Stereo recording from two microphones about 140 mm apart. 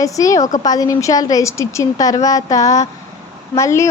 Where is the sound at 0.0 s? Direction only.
25° left (ahead or behind).